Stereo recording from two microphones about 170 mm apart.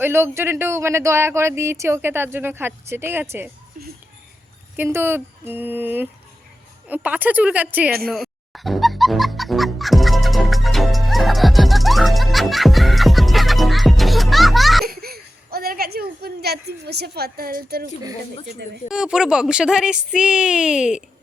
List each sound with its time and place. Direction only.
0.0 s speech: 15° right (ahead or behind)
3.8 s speech: 50° right (ahead or behind)
4.8 s speech: 15° right (ahead or behind)
8.5 s music: centre (ahead or behind)
14.8 s speech: 65° right (ahead or behind)
18.9 s music: 5° right (ahead or behind)